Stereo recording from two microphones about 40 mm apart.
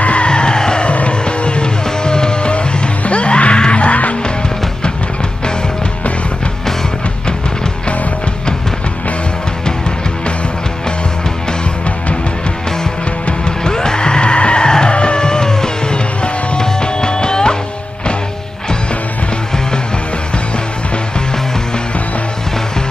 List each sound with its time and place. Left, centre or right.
0.0 s music: left
0.8 s music: left
13.7 s music: centre